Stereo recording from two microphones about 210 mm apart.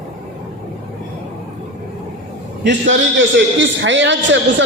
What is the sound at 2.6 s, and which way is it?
A man's voice, 60° right (ahead or behind).